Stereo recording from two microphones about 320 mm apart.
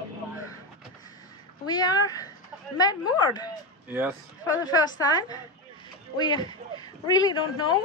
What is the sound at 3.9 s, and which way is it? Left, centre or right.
Speech, centre.